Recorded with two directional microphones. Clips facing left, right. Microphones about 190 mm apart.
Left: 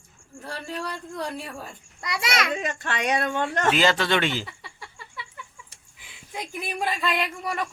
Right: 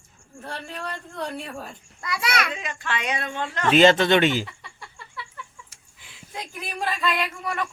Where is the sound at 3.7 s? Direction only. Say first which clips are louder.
Right 7 dB; 25° right (ahead or behind).